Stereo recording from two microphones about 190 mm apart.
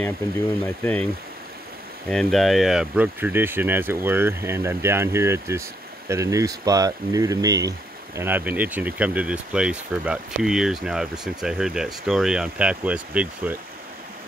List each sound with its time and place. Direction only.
0.7 s speech: 5° left (ahead or behind)
2.0 s speech: centre (ahead or behind)